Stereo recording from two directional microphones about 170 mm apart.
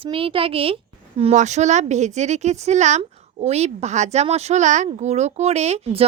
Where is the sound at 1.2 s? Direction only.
45° right (ahead or behind).